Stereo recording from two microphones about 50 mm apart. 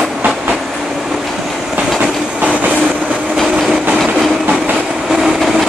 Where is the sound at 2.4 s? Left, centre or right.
Right.